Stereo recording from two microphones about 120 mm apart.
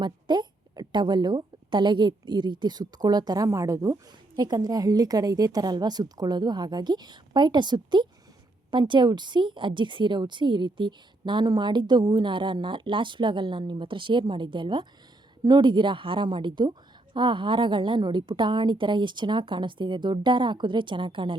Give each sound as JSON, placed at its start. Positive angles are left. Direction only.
{"t": 0.0, "sound": "a woman's voice", "side_deg": -40}